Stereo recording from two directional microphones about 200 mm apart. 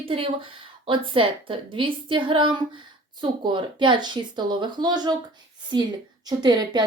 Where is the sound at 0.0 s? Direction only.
25° right (ahead or behind).